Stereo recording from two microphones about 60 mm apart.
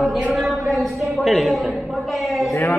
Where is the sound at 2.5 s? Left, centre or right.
Left.